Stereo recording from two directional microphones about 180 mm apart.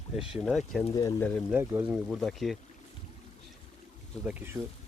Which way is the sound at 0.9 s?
20° left (ahead or behind).